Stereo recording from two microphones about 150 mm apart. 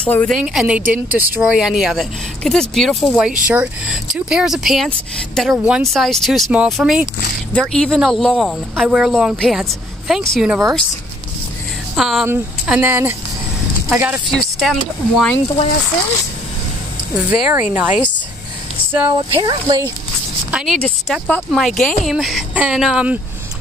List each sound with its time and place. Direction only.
0.0 s a woman's voice: 10° left (ahead or behind)
0.4 s speech: 5° right (ahead or behind)
7.7 s speech: 5° left (ahead or behind)
11.9 s speech: centre (ahead or behind)
12.6 s speech: 10° right (ahead or behind)
14.2 s speech: centre (ahead or behind)
17.3 s speech: 10° right (ahead or behind)
19.0 s speech: 30° right (ahead or behind)
20.5 s speech: centre (ahead or behind)